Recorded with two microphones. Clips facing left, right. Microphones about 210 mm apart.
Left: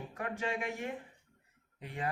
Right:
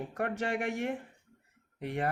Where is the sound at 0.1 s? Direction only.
70° right (ahead or behind).